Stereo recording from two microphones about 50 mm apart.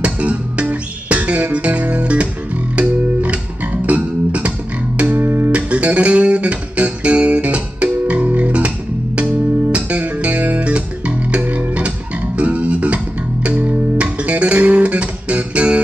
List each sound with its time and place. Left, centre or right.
0.0 s music: right
3.8 s bass guitar: right
4.9 s music: right
5.5 s music: right